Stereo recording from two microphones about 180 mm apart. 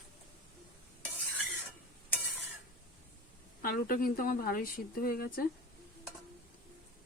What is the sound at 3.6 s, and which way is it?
A woman's voice, 55° left (ahead or behind).